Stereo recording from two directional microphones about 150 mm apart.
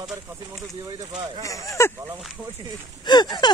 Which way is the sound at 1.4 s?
20° left (ahead or behind).